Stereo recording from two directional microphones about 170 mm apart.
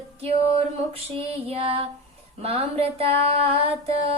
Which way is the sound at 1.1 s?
35° right (ahead or behind).